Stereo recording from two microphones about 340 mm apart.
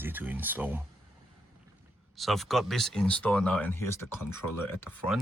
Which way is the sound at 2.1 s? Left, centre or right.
Centre.